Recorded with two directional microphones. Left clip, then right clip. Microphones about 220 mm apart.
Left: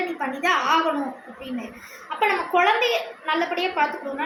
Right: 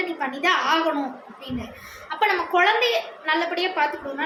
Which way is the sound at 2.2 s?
15° right (ahead or behind).